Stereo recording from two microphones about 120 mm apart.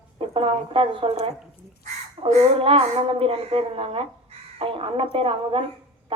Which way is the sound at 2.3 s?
55° right (ahead or behind).